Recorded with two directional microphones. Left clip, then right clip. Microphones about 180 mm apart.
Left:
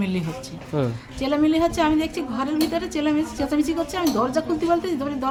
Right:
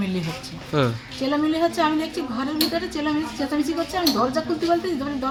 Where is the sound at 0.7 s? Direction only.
5° left (ahead or behind).